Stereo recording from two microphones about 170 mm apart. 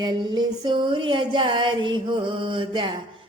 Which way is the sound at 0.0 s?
25° right (ahead or behind).